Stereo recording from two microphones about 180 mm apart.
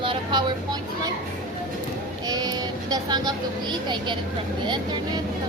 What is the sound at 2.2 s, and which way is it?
Sheep, 20° right (ahead or behind).